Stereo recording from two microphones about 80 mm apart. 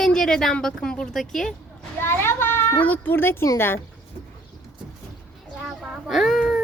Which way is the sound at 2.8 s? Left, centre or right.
Left.